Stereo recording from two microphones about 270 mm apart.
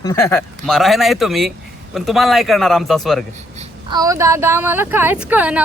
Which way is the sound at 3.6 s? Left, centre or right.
Centre.